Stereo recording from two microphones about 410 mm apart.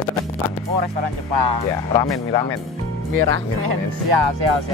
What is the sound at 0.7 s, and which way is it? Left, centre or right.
Speech, right.